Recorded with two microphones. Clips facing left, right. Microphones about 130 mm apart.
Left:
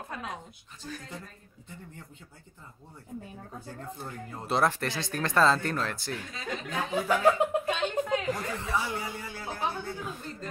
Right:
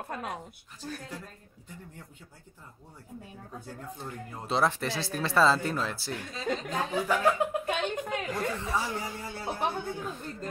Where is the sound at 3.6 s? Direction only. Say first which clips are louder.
Left 1 dB; centre (ahead or behind).